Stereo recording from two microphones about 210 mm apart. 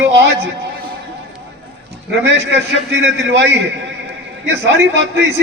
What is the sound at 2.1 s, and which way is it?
Speech, 55° right (ahead or behind).